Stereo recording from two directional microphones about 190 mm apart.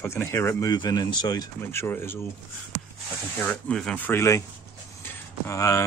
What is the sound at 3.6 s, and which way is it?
Speech, 5° left (ahead or behind).